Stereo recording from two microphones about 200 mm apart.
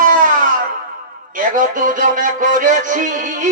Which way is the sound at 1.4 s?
40° right (ahead or behind).